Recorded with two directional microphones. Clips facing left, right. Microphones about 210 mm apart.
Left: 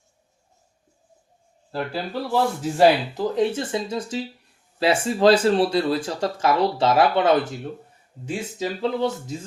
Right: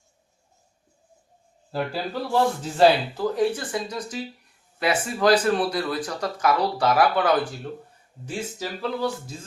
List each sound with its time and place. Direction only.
1.7 s speech: centre (ahead or behind)
2.7 s speech: 20° left (ahead or behind)